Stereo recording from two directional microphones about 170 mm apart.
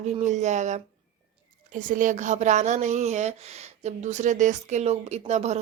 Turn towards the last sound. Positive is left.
turn(degrees=-40)  # may be behind; listen again after turning